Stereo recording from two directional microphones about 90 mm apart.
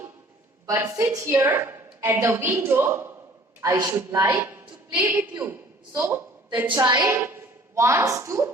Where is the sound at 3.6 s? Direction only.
40° right (ahead or behind).